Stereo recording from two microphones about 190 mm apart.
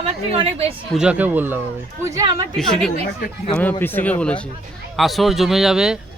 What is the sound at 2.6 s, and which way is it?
A man's voice, centre (ahead or behind).